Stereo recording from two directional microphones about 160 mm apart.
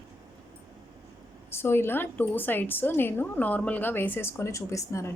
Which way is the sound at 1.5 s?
15° left (ahead or behind).